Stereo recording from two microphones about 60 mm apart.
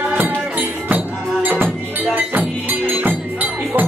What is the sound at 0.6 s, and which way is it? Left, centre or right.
Music, right.